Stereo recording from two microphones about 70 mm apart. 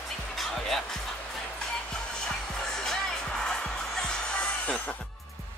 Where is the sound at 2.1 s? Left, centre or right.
Centre.